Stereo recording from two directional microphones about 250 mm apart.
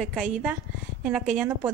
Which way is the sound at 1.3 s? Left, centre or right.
Centre.